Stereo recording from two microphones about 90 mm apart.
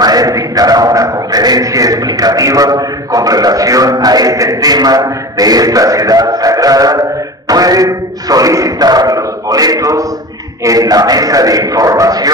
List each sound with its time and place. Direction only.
0.0 s a man's voice: 45° right (ahead or behind)